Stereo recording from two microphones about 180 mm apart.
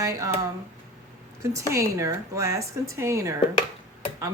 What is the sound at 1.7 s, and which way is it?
Speech, 15° right (ahead or behind).